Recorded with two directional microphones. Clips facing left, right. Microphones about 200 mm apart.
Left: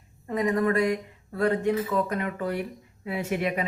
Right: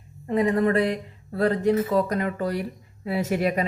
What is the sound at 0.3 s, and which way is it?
Speech, 30° right (ahead or behind).